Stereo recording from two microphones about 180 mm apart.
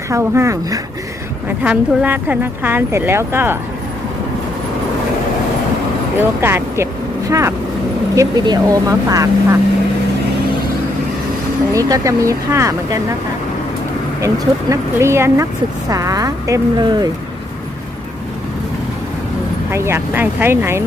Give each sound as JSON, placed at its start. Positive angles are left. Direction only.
{"t": 0.1, "sound": "speech", "side_deg": -15}
{"t": 1.5, "sound": "speech", "side_deg": -5}
{"t": 6.1, "sound": "speech", "side_deg": -15}
{"t": 11.7, "sound": "speech", "side_deg": -20}
{"t": 14.7, "sound": "speech", "side_deg": -15}
{"t": 19.7, "sound": "speech", "side_deg": -15}